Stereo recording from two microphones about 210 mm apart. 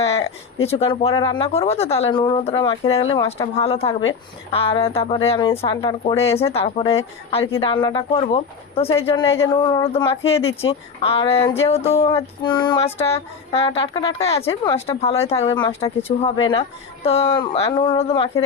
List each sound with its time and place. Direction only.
0.6 s speech: 30° left (ahead or behind)
6.4 s speech: 30° left (ahead or behind)
14.4 s a woman's voice: 15° left (ahead or behind)
14.8 s speech: 30° left (ahead or behind)